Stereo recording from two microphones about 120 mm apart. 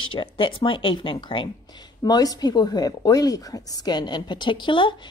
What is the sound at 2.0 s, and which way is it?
A woman's voice, 35° left (ahead or behind).